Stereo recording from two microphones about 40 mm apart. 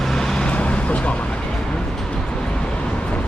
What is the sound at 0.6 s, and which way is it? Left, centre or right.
Vehicle, left.